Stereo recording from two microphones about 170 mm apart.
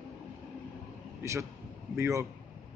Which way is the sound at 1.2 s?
15° right (ahead or behind).